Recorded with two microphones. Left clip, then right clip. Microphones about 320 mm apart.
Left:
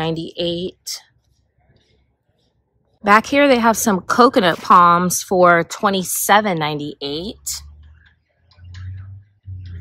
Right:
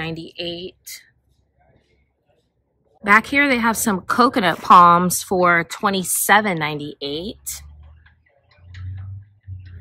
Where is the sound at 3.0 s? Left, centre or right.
Centre.